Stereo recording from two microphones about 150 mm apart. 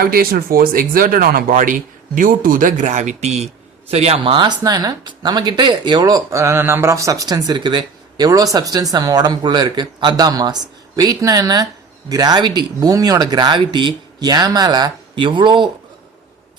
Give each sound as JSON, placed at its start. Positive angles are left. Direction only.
{"t": 0.0, "sound": "a man's voice", "side_deg": -75}